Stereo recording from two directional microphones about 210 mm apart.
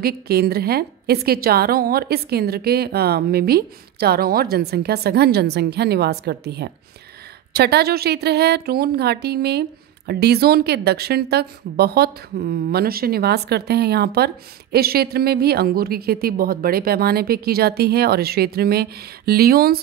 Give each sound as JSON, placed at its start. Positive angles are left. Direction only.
{"t": 0.0, "sound": "a woman's voice", "side_deg": -45}